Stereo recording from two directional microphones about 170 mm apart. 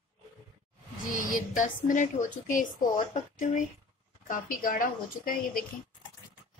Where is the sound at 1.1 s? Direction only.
50° left (ahead or behind).